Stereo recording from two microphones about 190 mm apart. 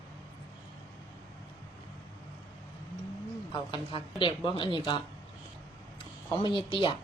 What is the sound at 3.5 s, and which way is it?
A woman's voice, 25° left (ahead or behind).